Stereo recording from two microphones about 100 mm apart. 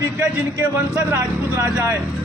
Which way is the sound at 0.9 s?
30° right (ahead or behind).